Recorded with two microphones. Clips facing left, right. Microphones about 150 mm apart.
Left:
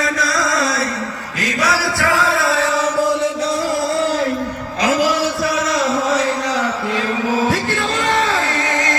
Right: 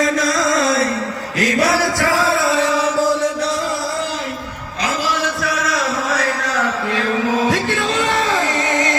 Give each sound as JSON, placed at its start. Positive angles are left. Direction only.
{"t": 0.0, "sound": "music", "side_deg": -50}
{"t": 1.4, "sound": "chant", "side_deg": -60}
{"t": 2.4, "sound": "music", "side_deg": 0}
{"t": 4.8, "sound": "a sound", "side_deg": 45}
{"t": 6.1, "sound": "mantra", "side_deg": 15}
{"t": 7.5, "sound": "music", "side_deg": 0}
{"t": 8.2, "sound": "music", "side_deg": -15}